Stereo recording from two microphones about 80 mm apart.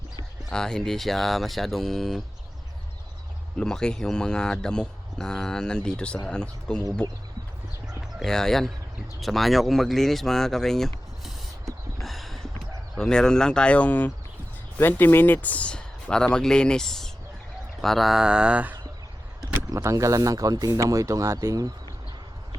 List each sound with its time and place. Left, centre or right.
0.5 s speech: centre
3.6 s speech: centre
8.2 s speech: centre
11.6 s a sound: centre
13.0 s speech: centre
19.7 s speech: right